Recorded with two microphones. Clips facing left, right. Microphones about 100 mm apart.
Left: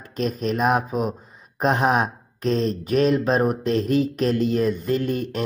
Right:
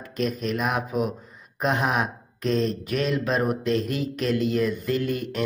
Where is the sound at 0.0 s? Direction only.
35° left (ahead or behind).